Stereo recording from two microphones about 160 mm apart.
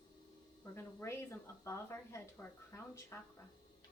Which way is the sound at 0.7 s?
15° left (ahead or behind).